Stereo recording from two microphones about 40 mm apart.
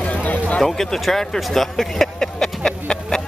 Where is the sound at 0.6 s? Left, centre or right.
Centre.